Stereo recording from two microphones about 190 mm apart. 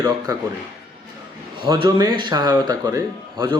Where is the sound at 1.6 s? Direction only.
25° right (ahead or behind).